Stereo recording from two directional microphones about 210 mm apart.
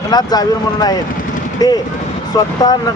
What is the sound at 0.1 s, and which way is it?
A man's voice, 20° left (ahead or behind).